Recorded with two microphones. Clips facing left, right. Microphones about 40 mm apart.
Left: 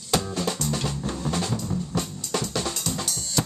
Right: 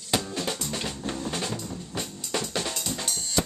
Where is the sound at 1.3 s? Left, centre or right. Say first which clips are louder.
Left 4 dB; centre.